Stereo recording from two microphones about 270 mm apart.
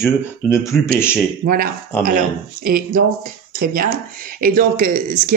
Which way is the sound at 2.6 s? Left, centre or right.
Right.